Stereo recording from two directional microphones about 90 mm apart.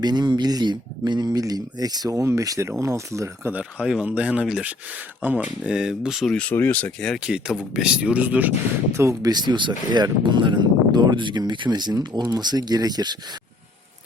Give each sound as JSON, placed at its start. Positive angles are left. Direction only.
{"t": 0.0, "sound": "speech", "side_deg": -50}
{"t": 1.3, "sound": "speech", "side_deg": -45}
{"t": 3.5, "sound": "speech", "side_deg": -10}
{"t": 6.2, "sound": "speech", "side_deg": 10}
{"t": 7.3, "sound": "speech", "side_deg": -10}
{"t": 9.0, "sound": "speech", "side_deg": -30}
{"t": 9.3, "sound": "speech", "side_deg": -55}